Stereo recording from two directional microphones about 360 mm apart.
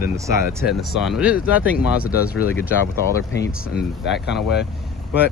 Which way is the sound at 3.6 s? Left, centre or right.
Left.